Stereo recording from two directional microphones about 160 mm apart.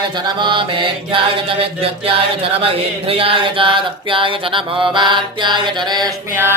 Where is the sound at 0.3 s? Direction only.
30° right (ahead or behind).